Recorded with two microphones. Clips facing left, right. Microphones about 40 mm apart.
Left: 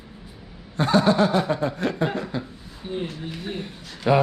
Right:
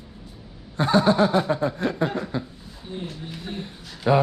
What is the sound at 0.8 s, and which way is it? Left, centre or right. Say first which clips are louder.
Speech: even; left.